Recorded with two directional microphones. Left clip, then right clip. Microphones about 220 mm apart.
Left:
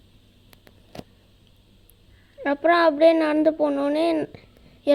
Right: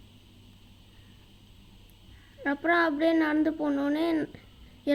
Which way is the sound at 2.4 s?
20° left (ahead or behind).